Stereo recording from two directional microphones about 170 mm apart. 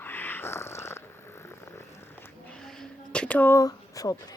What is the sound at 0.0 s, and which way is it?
Purr, 10° left (ahead or behind).